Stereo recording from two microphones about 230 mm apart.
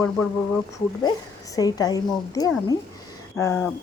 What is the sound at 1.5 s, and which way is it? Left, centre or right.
Speech, centre.